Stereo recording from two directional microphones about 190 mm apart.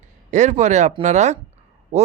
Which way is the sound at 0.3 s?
40° right (ahead or behind).